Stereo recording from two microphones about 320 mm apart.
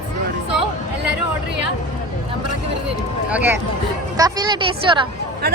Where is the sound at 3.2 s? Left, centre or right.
Centre.